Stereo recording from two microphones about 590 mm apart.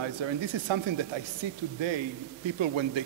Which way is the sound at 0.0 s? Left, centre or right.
Right.